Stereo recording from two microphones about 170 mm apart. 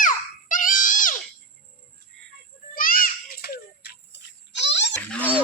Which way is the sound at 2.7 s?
55° left (ahead or behind).